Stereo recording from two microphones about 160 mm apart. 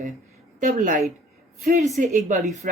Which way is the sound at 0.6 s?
50° right (ahead or behind).